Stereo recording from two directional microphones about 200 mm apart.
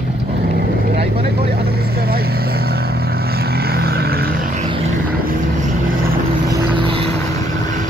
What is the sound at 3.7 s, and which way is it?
Vehicle, 50° right (ahead or behind).